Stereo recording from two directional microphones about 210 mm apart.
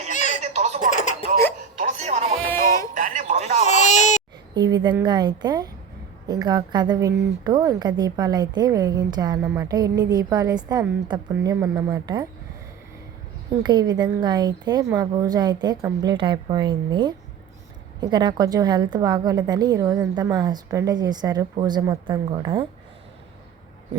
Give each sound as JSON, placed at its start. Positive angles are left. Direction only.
{"t": 0.1, "sound": "baby laughter", "side_deg": 35}
{"t": 0.5, "sound": "baby laughter", "side_deg": -35}
{"t": 0.8, "sound": "a sound", "side_deg": 35}
{"t": 1.8, "sound": "music", "side_deg": -35}
{"t": 2.9, "sound": "a sound", "side_deg": -40}
{"t": 3.6, "sound": "baby cry", "side_deg": 35}
{"t": 4.5, "sound": "a woman's voice", "side_deg": -20}
{"t": 13.6, "sound": "a woman's voice", "side_deg": -20}